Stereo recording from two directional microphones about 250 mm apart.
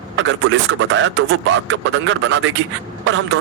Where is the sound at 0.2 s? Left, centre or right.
Right.